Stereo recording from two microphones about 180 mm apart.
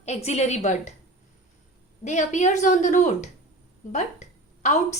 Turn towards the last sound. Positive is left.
turn(degrees=40)  # may be behind; listen again after turning